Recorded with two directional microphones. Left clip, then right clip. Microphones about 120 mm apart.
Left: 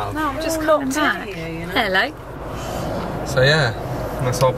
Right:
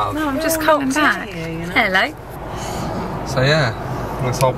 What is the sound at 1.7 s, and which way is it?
Speech, centre (ahead or behind).